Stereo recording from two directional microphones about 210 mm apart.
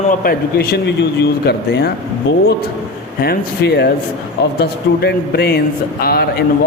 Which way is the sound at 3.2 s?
50° left (ahead or behind).